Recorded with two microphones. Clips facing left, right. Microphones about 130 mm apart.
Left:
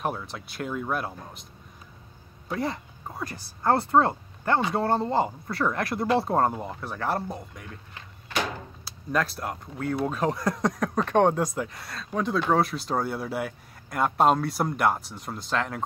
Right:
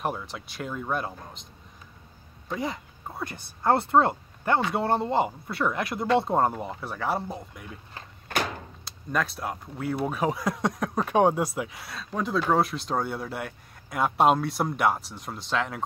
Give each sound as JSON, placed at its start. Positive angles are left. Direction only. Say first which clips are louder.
{"t": 0.0, "sound": "speech", "louder": "even", "side_deg": 0}
{"t": 3.3, "sound": "speech", "louder": "even", "side_deg": -25}
{"t": 5.6, "sound": "speech", "louder": "left 1 dB", "side_deg": -5}
{"t": 8.3, "sound": "a sound", "louder": "right 1 dB", "side_deg": -50}
{"t": 8.8, "sound": "speech", "louder": "left 2 dB", "side_deg": 0}